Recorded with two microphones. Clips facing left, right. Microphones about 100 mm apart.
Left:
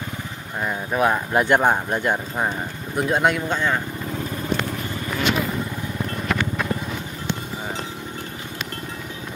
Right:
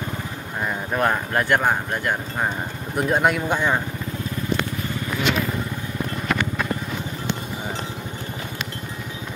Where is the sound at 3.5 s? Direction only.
15° right (ahead or behind).